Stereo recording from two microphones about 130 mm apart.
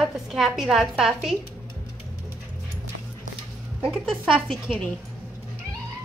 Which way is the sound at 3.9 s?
5° right (ahead or behind).